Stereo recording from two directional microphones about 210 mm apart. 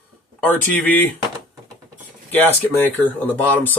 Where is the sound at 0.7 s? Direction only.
10° left (ahead or behind).